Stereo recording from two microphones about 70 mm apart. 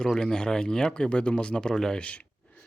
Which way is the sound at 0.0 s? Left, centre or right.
Centre.